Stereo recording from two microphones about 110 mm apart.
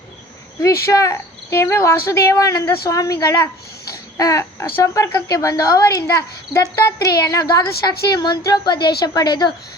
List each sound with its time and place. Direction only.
0.6 s speech: 25° left (ahead or behind)
3.8 s babbling: 30° left (ahead or behind)
4.8 s a woman's voice: 30° left (ahead or behind)